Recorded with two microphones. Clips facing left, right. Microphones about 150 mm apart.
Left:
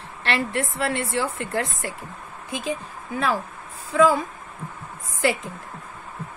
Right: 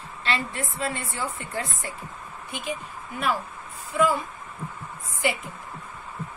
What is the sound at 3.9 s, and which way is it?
Speech, 90° left.